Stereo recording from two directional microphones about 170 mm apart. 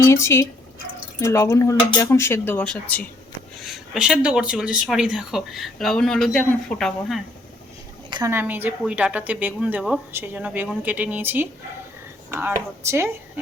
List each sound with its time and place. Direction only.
0.0 s speech: 15° left (ahead or behind)
3.6 s speech: 5° right (ahead or behind)
8.1 s a woman's voice: 15° right (ahead or behind)